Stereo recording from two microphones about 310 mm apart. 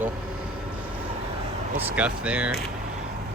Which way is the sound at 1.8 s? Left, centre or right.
Centre.